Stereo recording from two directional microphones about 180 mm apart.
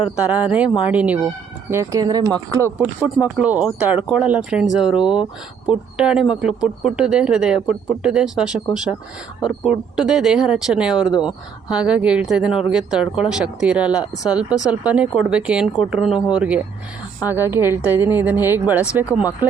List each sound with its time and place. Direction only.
0.0 s speech: 10° right (ahead or behind)
3.3 s speech: 5° right (ahead or behind)